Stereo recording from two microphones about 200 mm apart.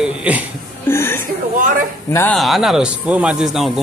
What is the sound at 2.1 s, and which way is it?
Speech, 5° left (ahead or behind).